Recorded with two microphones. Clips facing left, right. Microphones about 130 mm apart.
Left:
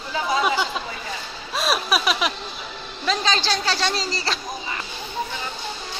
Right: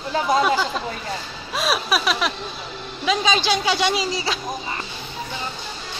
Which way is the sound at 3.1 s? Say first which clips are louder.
Right 3 dB; 10° right (ahead or behind).